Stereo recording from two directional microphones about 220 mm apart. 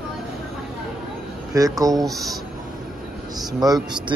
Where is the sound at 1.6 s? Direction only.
15° right (ahead or behind).